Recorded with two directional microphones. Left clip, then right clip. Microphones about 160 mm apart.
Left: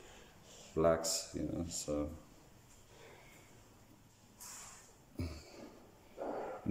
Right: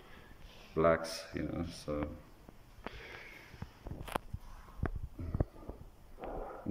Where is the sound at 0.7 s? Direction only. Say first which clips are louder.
Right 2 dB; 15° left (ahead or behind).